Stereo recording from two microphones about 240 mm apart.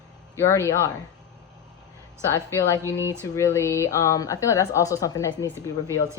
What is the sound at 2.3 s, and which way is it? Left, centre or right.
A woman's voice, centre.